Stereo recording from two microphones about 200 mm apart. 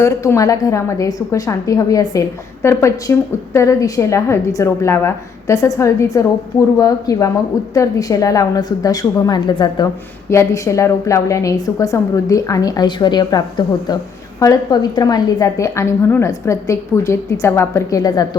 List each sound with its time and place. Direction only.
0.0 s a woman's voice: 15° left (ahead or behind)